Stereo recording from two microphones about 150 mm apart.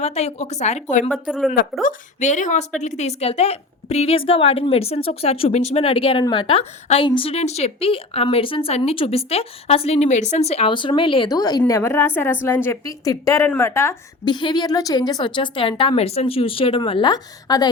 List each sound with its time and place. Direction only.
0.0 s a woman's voice: 45° left (ahead or behind)
1.3 s a woman's voice: 5° right (ahead or behind)
1.8 s a woman's voice: 55° left (ahead or behind); by 13.9 s 20° left (ahead or behind)
14.3 s a woman's voice: 30° left (ahead or behind)